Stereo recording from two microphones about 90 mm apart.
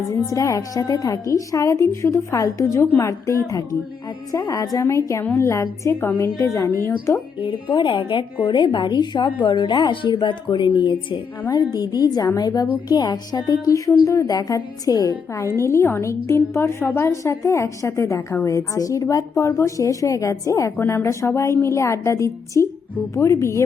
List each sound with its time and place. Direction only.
0.3 s a woman's voice: 40° left (ahead or behind)
7.4 s a woman's voice: 70° left (ahead or behind)
11.9 s a woman's voice: 45° left (ahead or behind)
15.6 s a woman's voice: 30° left (ahead or behind)